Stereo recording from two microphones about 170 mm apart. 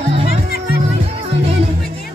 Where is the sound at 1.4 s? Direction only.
35° right (ahead or behind).